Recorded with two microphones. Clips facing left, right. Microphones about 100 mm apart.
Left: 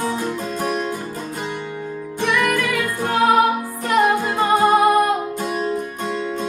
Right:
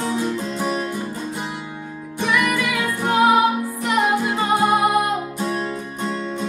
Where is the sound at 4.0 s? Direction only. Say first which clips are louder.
Left 3 dB; 15° left (ahead or behind).